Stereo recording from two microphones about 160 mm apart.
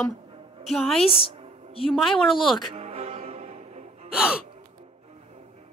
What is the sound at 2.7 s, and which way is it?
Music, 40° right (ahead or behind).